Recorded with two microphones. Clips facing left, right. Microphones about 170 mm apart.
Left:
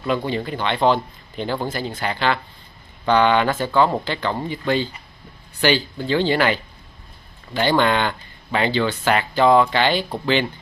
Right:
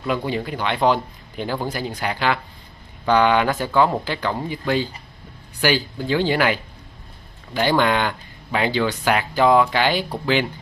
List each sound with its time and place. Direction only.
0.0 s speech: 10° right (ahead or behind)